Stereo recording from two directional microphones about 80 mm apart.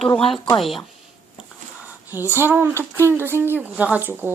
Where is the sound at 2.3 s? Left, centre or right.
Right.